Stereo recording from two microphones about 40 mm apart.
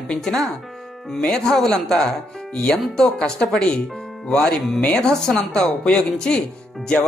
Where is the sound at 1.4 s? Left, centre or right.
Centre.